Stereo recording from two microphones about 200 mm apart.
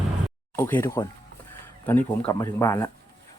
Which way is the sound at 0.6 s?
10° left (ahead or behind).